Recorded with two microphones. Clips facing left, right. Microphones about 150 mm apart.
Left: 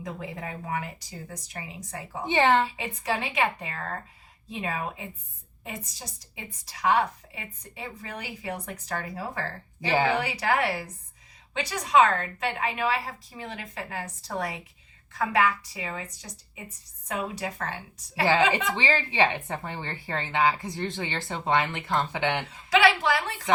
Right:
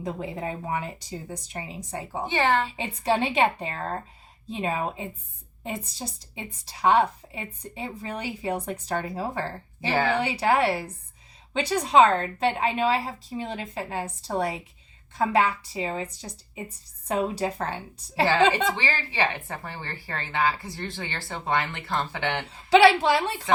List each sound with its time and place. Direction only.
0.0 s a woman's voice: 30° right (ahead or behind)
2.2 s speech: 20° left (ahead or behind)
2.7 s a woman's voice: 30° right (ahead or behind)
18.8 s speech: 20° left (ahead or behind)
22.4 s a woman's voice: 30° right (ahead or behind)